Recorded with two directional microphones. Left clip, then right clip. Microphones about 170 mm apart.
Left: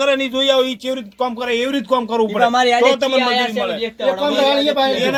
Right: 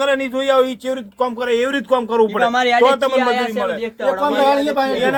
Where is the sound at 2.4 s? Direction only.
50° left (ahead or behind).